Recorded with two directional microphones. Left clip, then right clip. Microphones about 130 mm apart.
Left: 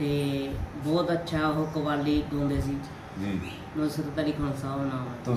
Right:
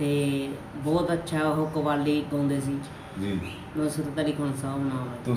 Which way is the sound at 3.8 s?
30° right (ahead or behind).